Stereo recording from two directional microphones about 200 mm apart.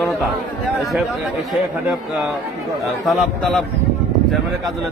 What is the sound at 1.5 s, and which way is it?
Speech, centre (ahead or behind).